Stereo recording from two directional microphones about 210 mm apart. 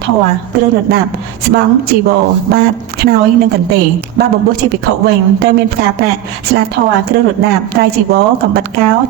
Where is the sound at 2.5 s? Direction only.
50° right (ahead or behind).